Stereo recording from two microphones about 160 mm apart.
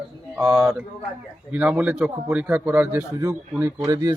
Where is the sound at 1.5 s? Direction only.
10° right (ahead or behind).